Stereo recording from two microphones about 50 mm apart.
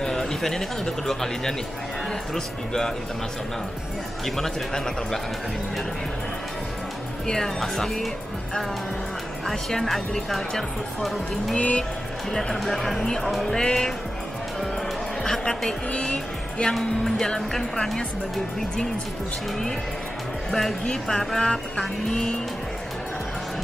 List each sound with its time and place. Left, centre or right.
0.0 s speech: centre
4.4 s speech: centre
7.2 s speech: centre
9.5 s speech: centre
11.5 s speech: left
12.5 s speech: centre
13.6 s speech: centre
15.2 s speech: centre
15.9 s speech: left
16.7 s speech: centre
20.8 s speech: centre